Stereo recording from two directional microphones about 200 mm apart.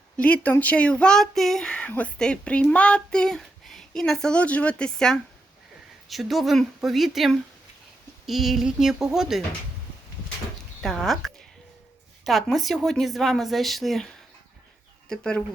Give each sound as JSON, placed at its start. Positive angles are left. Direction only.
{"t": 0.2, "sound": "speech", "side_deg": 5}
{"t": 10.8, "sound": "speech", "side_deg": 0}
{"t": 15.1, "sound": "speech", "side_deg": 5}